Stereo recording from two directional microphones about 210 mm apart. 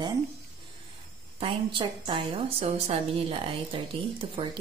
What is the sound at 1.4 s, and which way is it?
A woman's voice, 25° right (ahead or behind).